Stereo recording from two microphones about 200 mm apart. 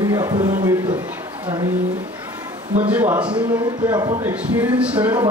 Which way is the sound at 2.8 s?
10° right (ahead or behind).